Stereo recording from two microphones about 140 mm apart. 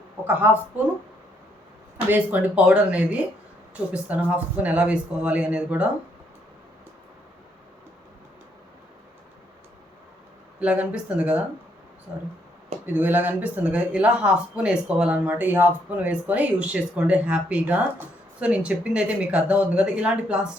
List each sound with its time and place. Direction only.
2.0 s speech: 10° right (ahead or behind)
10.6 s speech: 10° right (ahead or behind)
12.8 s speech: 15° right (ahead or behind)